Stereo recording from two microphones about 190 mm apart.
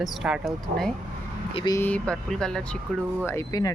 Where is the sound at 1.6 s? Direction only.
20° left (ahead or behind).